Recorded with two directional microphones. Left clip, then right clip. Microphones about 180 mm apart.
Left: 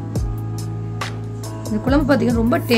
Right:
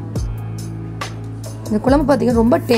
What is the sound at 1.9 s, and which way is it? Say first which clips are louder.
Speech: right 3 dB; 15° right (ahead or behind).